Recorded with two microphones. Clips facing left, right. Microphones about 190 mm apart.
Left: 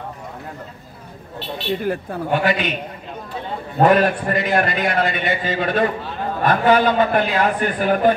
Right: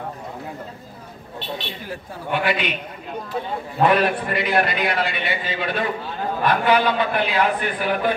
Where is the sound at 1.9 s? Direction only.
45° left (ahead or behind).